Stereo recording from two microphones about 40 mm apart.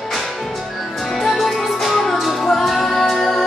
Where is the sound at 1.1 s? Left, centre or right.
Centre.